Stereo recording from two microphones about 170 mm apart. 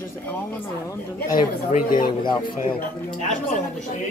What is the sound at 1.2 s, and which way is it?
Speech, 50° left (ahead or behind).